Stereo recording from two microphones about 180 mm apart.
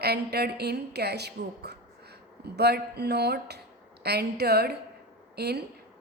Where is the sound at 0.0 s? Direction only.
65° right (ahead or behind).